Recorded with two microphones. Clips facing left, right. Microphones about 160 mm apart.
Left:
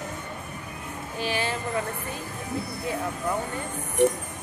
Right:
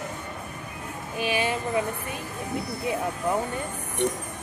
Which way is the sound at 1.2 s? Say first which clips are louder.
Right 3 dB; 15° right (ahead or behind).